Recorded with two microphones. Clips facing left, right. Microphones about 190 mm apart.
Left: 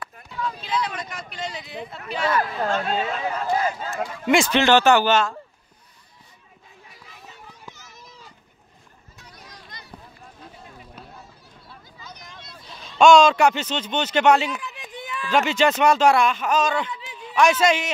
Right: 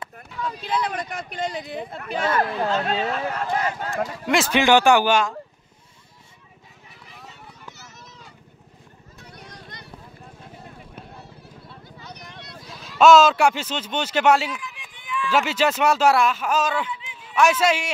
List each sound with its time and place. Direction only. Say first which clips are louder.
0.7 s speech: right 4 dB; 55° right (ahead or behind)
3.9 s speech: left 2 dB; centre (ahead or behind)
4.5 s speech: right 2 dB; 10° right (ahead or behind)
9.2 s vehicle: right 3 dB; 60° right (ahead or behind)
12.0 s a sound: right 2 dB; 65° right (ahead or behind)
12.6 s speech: even; 5° right (ahead or behind)
14.5 s run: left 3 dB; 40° left (ahead or behind)
15.3 s speech: left 2 dB; 5° right (ahead or behind)
16.9 s a sound: even; 40° left (ahead or behind)
17.2 s a man's voice: left 1 dB; 5° right (ahead or behind)